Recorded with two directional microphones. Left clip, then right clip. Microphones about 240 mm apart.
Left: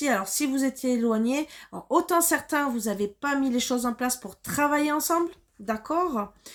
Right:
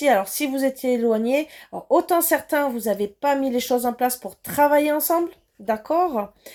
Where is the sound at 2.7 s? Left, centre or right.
Centre.